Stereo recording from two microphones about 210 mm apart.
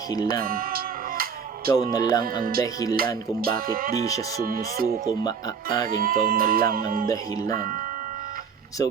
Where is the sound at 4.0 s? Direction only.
15° left (ahead or behind).